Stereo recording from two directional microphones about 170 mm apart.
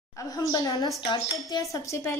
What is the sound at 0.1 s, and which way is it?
A woman's voice, 20° left (ahead or behind).